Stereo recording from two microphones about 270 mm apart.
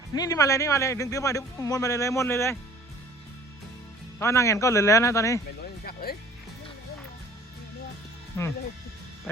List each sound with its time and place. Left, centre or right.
0.2 s a man's voice: centre
4.2 s a man's voice: centre
5.8 s music: left
8.4 s a man's voice: centre
9.3 s music: centre